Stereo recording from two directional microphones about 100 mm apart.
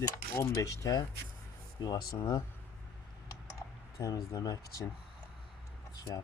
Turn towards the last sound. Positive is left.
turn(degrees=35)  # may be behind; listen again after turning